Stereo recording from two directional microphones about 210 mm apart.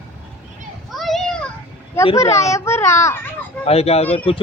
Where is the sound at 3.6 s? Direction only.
30° left (ahead or behind).